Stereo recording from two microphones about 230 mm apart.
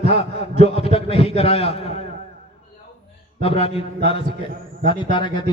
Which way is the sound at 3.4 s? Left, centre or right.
Left.